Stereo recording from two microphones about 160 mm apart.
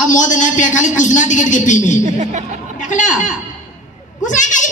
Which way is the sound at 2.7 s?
50° left (ahead or behind).